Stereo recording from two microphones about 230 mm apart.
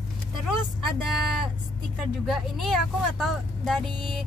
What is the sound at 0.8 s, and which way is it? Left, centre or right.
Speech, centre.